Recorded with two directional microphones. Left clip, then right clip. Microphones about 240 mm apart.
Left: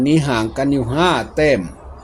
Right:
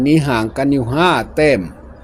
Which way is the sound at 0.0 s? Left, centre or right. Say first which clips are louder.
Right 2 dB; centre.